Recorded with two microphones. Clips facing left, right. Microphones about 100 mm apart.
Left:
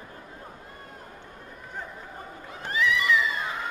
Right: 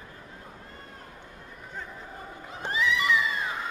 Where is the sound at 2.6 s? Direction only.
20° right (ahead or behind).